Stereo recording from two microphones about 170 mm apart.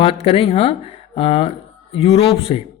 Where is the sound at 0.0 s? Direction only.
35° left (ahead or behind).